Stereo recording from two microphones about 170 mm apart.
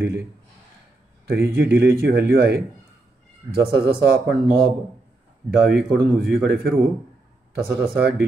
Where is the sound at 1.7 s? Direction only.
65° right (ahead or behind).